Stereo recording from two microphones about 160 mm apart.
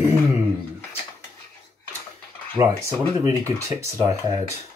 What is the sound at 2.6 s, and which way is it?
Speech, 20° right (ahead or behind).